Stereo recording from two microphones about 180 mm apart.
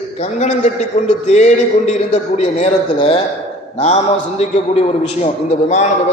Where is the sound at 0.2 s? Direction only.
40° left (ahead or behind).